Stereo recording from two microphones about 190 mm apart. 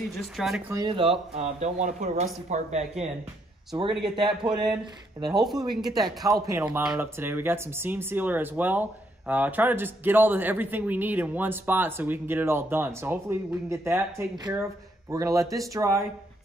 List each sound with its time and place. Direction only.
0.2 s speech: centre (ahead or behind)
0.7 s speech: 25° right (ahead or behind)
4.4 s speech: 20° right (ahead or behind)
5.2 s speech: centre (ahead or behind)
5.9 s speech: 20° right (ahead or behind)